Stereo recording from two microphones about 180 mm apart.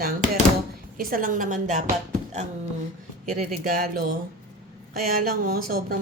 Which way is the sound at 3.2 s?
50° right (ahead or behind).